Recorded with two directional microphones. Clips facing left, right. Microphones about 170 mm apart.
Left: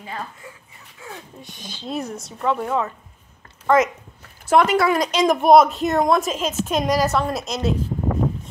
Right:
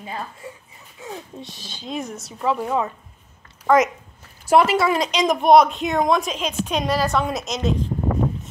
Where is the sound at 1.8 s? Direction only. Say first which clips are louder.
Left 1 dB; centre (ahead or behind).